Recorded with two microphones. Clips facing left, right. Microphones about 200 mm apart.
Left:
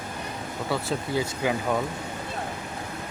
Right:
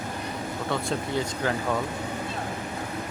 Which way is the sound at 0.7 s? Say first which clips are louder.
Left 1 dB; 5° left (ahead or behind).